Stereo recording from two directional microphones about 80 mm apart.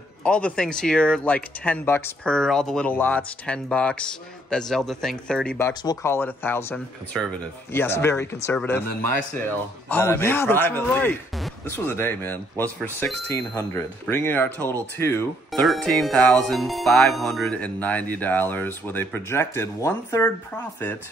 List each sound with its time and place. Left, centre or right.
0.2 s a man's voice: centre
1.9 s speech: left
2.2 s a man's voice: centre
2.9 s a man's voice: left
6.0 s speech: left
7.2 s speech: centre
7.7 s speech: left
9.5 s speech: left
13.6 s speech: left
15.6 s speech: centre
17.5 s speech: centre